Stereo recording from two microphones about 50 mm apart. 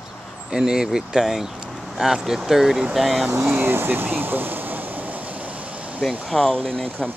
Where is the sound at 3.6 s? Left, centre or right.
Right.